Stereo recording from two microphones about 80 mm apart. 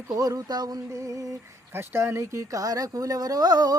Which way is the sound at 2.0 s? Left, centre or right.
Right.